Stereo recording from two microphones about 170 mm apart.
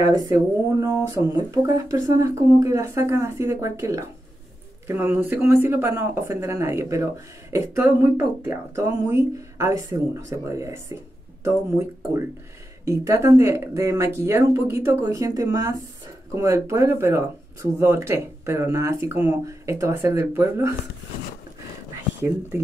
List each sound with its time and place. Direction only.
0.0 s speech: 20° right (ahead or behind)
12.8 s speech: 15° right (ahead or behind)